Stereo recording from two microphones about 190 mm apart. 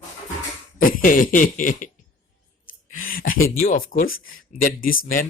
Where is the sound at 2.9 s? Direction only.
45° left (ahead or behind).